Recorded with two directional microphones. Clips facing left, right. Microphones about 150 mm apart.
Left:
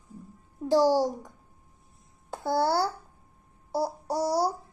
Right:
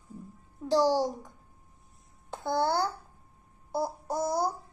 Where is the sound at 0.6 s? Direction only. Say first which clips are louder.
Left 3 dB; 10° left (ahead or behind).